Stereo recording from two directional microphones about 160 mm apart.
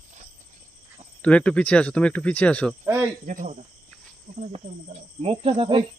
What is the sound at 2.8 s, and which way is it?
Speech, 15° right (ahead or behind).